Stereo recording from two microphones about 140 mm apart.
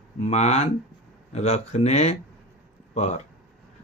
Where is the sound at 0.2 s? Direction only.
50° left (ahead or behind).